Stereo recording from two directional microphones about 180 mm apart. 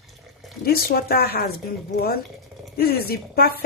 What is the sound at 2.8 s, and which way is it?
Speech, 60° left (ahead or behind).